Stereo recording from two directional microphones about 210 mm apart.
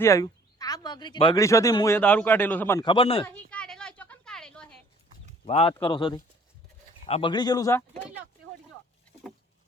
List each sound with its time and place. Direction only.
0.0 s speech: 15° left (ahead or behind)
2.8 s a man's voice: 25° left (ahead or behind)
3.2 s a sound: 5° left (ahead or behind)
5.5 s a man's voice: 30° left (ahead or behind); by 8.0 s 15° left (ahead or behind)